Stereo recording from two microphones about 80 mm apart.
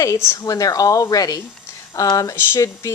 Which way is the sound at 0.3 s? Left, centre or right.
Left.